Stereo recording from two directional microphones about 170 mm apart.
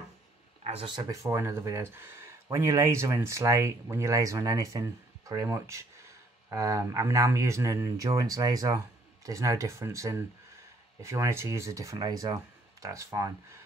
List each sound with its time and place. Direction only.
0.7 s speech: 30° right (ahead or behind)